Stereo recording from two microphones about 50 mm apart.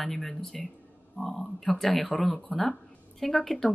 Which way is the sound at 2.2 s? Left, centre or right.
Centre.